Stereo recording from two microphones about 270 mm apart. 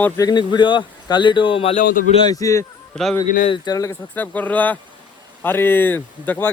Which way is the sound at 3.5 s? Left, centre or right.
Centre.